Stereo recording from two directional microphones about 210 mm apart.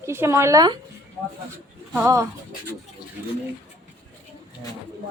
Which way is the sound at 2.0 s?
10° right (ahead or behind).